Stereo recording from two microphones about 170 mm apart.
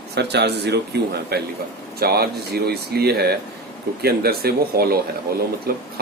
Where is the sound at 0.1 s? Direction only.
80° right.